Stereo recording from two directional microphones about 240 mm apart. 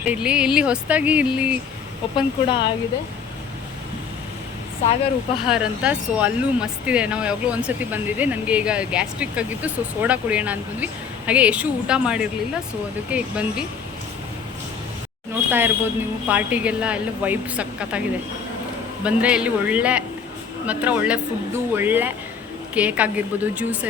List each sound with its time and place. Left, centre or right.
0.0 s speech: centre
2.1 s speech: centre
5.5 s speech: centre
15.4 s speech: centre
19.0 s speech: centre